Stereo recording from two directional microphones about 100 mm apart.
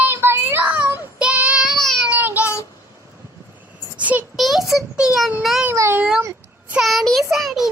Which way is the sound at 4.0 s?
15° right (ahead or behind).